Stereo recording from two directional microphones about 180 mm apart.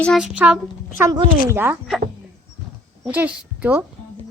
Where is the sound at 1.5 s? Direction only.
10° right (ahead or behind).